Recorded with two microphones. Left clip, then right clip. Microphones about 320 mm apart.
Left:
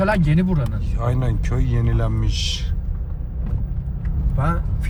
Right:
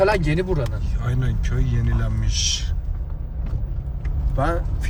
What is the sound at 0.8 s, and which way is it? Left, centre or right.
Speech, centre.